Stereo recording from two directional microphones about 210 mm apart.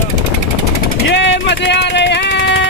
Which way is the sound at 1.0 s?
60° left (ahead or behind).